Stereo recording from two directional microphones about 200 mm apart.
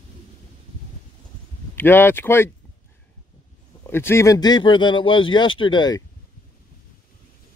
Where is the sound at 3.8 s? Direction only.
10° left (ahead or behind).